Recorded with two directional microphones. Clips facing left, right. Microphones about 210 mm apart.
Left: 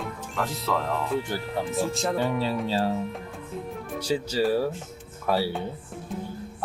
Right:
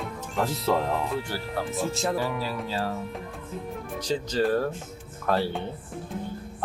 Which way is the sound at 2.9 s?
Centre (ahead or behind).